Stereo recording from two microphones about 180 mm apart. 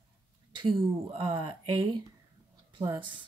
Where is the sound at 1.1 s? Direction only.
30° right (ahead or behind).